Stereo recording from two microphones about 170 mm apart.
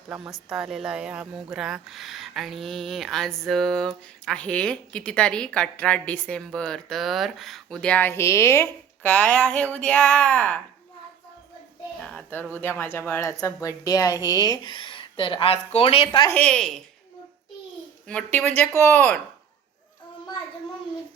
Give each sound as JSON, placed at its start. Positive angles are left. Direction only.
{"t": 0.1, "sound": "speech", "side_deg": -5}
{"t": 11.9, "sound": "speech", "side_deg": 5}
{"t": 16.3, "sound": "speech", "side_deg": 5}
{"t": 18.1, "sound": "speech", "side_deg": 10}